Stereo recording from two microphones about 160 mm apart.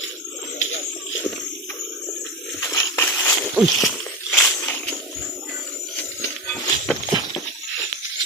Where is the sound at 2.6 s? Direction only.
20° left (ahead or behind).